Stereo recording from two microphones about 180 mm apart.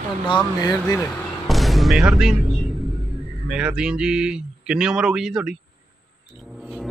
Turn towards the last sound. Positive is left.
turn(degrees=0)  # may be behind; listen again after turning